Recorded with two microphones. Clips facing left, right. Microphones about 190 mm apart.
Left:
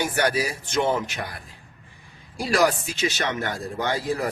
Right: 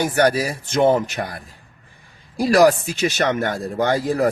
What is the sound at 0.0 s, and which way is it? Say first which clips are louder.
Speech: right 6 dB; 40° right (ahead or behind).